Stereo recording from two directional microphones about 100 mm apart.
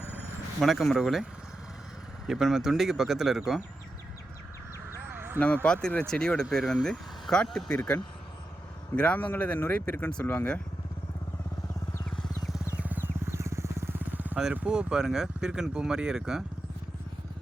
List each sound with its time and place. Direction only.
0.6 s speech: centre (ahead or behind)
2.2 s speech: 5° right (ahead or behind)
5.1 s a sound: 20° right (ahead or behind)
5.6 s speech: 10° left (ahead or behind)
12.8 s vehicle: 20° right (ahead or behind)
14.5 s speech: 15° right (ahead or behind)